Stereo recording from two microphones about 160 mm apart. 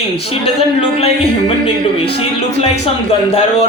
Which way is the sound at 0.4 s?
35° left (ahead or behind).